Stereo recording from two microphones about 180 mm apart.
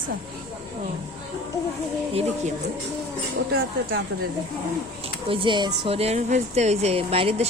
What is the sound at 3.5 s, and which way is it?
Speech, 60° right (ahead or behind).